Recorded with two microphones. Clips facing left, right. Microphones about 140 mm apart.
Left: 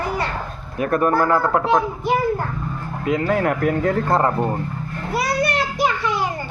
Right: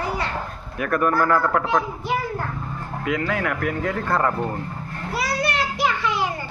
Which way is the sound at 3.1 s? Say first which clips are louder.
Left 5 dB; 30° left (ahead or behind).